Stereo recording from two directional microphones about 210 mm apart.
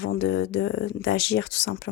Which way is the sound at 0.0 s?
55° left (ahead or behind).